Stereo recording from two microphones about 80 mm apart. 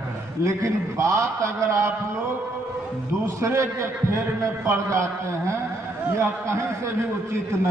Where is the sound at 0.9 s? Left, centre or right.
Right.